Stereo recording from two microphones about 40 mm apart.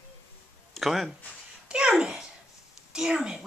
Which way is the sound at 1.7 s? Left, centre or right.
Centre.